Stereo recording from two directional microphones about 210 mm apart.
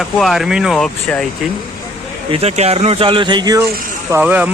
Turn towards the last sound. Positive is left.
turn(degrees=-5)  # may be behind; listen again after turning